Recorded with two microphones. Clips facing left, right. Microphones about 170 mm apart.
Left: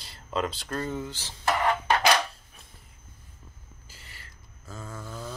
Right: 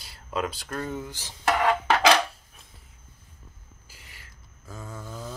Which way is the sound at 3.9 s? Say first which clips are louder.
Left 1 dB; 15° right (ahead or behind).